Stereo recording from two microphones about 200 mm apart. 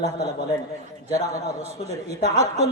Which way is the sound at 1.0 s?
15° left (ahead or behind).